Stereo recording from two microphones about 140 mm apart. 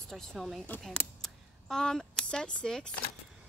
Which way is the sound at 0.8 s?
5° left (ahead or behind).